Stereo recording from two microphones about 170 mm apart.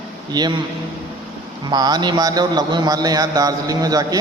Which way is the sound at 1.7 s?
25° right (ahead or behind).